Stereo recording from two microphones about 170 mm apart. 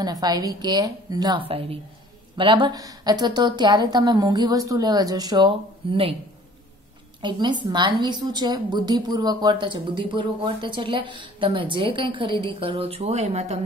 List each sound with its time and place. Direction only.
0.0 s a woman's voice: 25° right (ahead or behind)
7.2 s a woman's voice: 25° right (ahead or behind)